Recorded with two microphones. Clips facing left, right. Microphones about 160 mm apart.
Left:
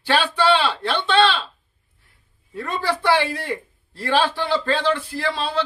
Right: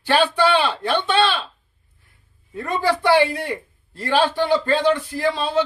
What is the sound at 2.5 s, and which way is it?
A man's voice, 15° right (ahead or behind).